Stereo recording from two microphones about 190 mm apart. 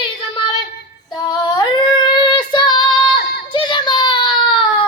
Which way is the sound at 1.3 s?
20° left (ahead or behind).